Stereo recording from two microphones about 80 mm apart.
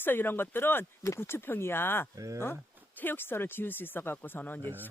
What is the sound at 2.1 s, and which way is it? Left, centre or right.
Speech, right.